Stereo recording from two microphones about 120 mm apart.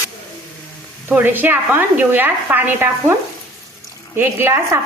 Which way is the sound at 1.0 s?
15° right (ahead or behind).